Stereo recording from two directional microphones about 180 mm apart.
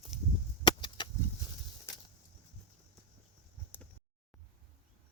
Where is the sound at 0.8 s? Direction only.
25° left (ahead or behind).